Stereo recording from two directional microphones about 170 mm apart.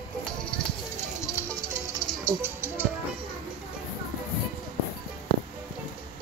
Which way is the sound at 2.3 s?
15° right (ahead or behind).